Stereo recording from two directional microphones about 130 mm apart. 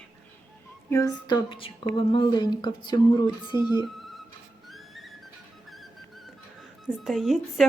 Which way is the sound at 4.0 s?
Centre (ahead or behind).